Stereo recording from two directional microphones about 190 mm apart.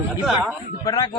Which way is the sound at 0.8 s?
20° left (ahead or behind).